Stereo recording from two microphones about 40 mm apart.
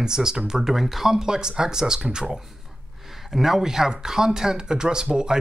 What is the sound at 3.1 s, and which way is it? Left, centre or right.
A man's voice, centre.